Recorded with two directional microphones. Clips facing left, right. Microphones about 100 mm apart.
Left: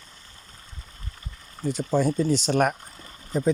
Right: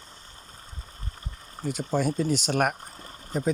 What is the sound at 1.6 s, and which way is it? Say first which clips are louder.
Speech: left 3 dB; 10° right (ahead or behind).